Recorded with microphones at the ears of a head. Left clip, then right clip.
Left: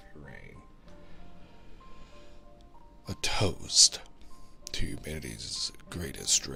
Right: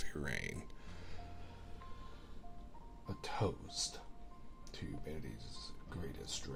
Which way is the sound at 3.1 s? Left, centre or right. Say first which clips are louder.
Left 9 dB; left.